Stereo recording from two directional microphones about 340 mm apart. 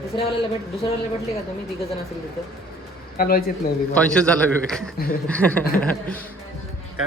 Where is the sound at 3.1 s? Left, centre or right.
Left.